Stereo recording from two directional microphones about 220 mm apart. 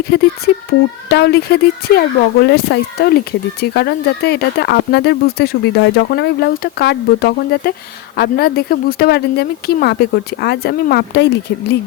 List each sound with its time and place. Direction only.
0.1 s speech: 45° left (ahead or behind)